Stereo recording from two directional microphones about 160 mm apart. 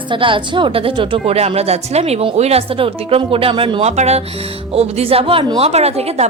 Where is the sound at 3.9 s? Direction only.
45° right (ahead or behind).